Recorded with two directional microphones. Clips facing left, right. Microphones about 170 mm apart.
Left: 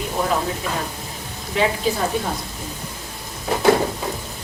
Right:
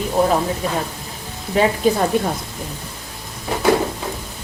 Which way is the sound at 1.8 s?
50° right (ahead or behind).